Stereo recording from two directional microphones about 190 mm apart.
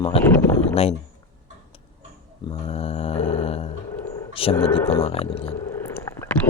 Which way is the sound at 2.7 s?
35° left (ahead or behind).